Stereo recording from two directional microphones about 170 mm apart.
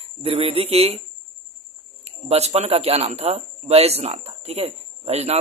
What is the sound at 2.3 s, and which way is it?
Speech, 40° right (ahead or behind).